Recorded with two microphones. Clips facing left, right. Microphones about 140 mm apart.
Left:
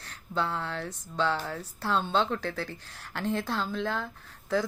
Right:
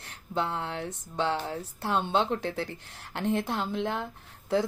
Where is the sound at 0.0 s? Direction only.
20° right (ahead or behind).